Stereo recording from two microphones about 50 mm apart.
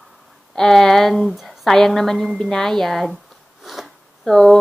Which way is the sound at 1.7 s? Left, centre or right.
Centre.